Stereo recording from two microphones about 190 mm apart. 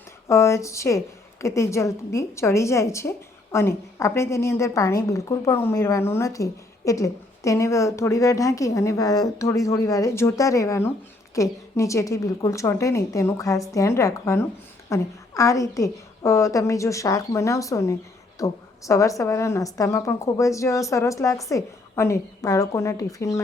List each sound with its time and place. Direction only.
0.3 s a woman's voice: 15° left (ahead or behind)